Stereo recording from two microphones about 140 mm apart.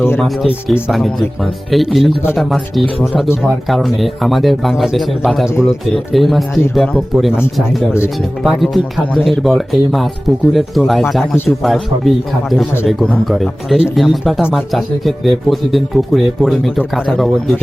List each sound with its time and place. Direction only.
0.2 s speech: centre (ahead or behind)